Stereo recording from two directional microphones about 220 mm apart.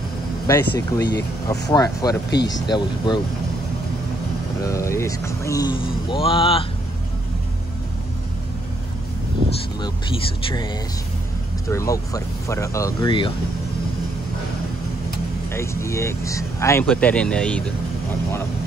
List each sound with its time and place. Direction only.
0.5 s speech: 15° left (ahead or behind)
4.6 s speech: 15° left (ahead or behind)
11.7 s speech: 15° left (ahead or behind)
15.5 s speech: 10° left (ahead or behind)